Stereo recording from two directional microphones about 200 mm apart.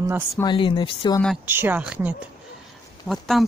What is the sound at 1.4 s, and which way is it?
Speech, 10° right (ahead or behind).